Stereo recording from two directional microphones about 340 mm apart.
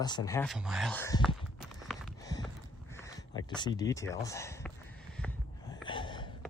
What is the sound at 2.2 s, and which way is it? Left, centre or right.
Clip-clop, centre.